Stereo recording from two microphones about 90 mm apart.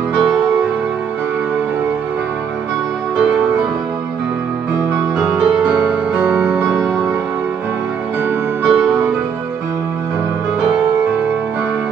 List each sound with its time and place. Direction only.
3.2 s music: 10° right (ahead or behind)
5.4 s music: 10° right (ahead or behind)
8.6 s music: centre (ahead or behind)